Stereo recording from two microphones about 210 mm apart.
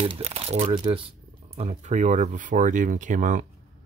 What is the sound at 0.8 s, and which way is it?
Speech, 25° right (ahead or behind).